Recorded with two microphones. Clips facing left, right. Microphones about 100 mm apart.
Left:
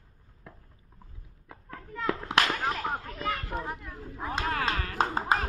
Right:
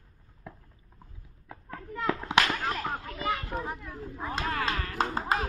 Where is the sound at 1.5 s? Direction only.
Centre (ahead or behind).